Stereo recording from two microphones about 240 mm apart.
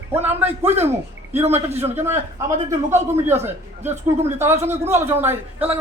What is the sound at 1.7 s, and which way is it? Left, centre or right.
Speech, centre.